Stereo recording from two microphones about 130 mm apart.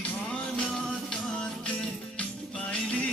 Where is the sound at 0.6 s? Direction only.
5° left (ahead or behind).